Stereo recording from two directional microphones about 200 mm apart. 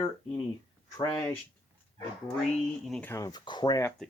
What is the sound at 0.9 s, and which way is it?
Speech, 15° left (ahead or behind).